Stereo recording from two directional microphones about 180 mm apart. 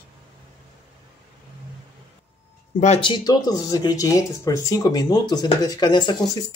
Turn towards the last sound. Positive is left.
turn(degrees=25)  # may be behind; listen again after turning